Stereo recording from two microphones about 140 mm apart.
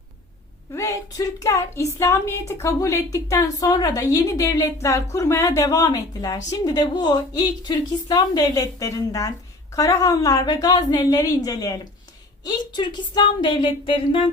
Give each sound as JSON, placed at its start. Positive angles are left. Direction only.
{"t": 0.7, "sound": "a woman's voice", "side_deg": 20}